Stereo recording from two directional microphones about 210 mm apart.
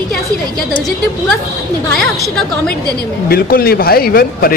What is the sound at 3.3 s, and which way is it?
Speech, 45° left (ahead or behind).